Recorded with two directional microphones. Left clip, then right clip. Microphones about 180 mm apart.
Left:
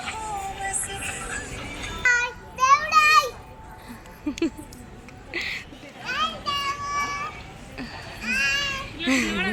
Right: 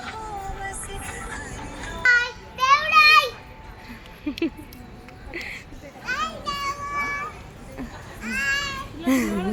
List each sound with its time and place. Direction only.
0.0 s music: 30° right (ahead or behind)
2.0 s a sound: 15° left (ahead or behind)
4.3 s a sound: 5° left (ahead or behind)
6.1 s children playing: 15° right (ahead or behind)
7.8 s cat: 10° right (ahead or behind)
9.0 s speech: 25° right (ahead or behind)